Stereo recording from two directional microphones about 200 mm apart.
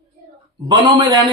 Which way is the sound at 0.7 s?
25° right (ahead or behind).